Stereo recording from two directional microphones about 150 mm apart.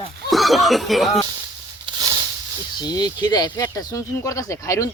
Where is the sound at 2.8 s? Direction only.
25° left (ahead or behind).